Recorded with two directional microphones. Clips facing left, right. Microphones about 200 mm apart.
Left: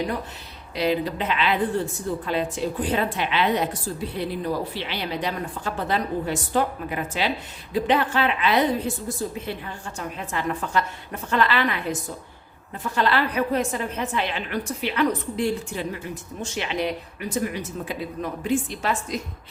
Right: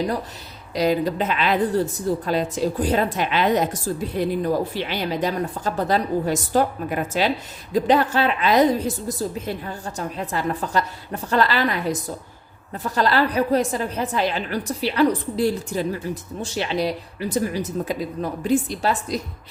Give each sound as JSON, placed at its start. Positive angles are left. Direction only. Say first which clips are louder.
{"t": 0.8, "sound": "a woman's voice", "louder": "right 3 dB", "side_deg": -45}